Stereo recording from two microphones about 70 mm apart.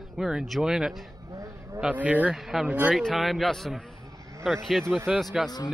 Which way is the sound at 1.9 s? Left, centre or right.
Right.